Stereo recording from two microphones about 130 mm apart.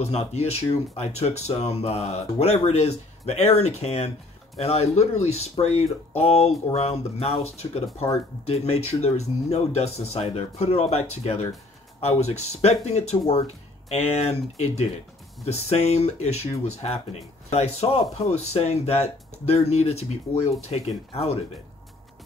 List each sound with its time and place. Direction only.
0.0 s speech: 55° left (ahead or behind)